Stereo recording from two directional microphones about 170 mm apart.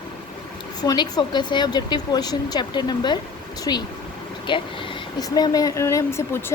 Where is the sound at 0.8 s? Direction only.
20° left (ahead or behind).